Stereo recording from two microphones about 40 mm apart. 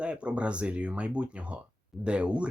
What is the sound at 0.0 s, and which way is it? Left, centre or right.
Speech, right.